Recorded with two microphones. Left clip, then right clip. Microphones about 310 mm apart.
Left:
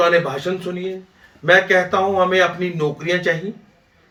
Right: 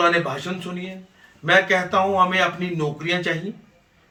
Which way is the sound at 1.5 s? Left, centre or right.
Centre.